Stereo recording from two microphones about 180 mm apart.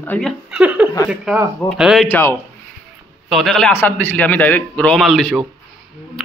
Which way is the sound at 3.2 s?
Centre (ahead or behind).